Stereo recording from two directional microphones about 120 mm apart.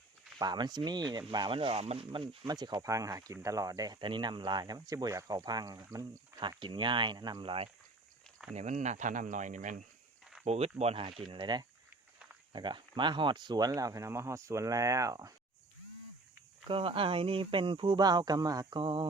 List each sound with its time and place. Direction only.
0.3 s speech: 35° right (ahead or behind)
2.5 s speech: 35° right (ahead or behind)
6.6 s speech: 40° right (ahead or behind)
8.5 s speech: 80° right
10.4 s speech: 60° right (ahead or behind)
11.3 s speech: 40° right (ahead or behind)
16.6 s speech: 50° right (ahead or behind); by 18.8 s 30° right (ahead or behind)
18.8 s speech: 40° right (ahead or behind)